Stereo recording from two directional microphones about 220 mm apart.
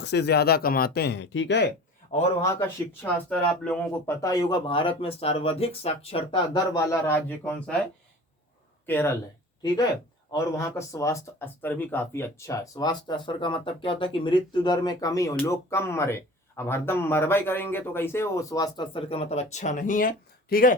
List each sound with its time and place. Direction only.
0.0 s speech: 50° left (ahead or behind)
2.4 s speech: 10° left (ahead or behind)
8.9 s speech: 10° left (ahead or behind)
10.3 s speech: 15° left (ahead or behind); by 20.7 s 40° left (ahead or behind)